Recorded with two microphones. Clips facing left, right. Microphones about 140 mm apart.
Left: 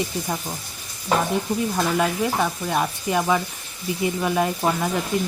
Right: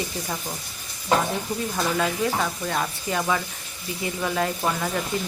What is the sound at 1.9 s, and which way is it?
Speech, 15° left (ahead or behind).